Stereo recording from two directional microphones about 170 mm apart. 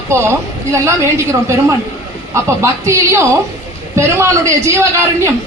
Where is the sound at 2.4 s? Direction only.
15° right (ahead or behind).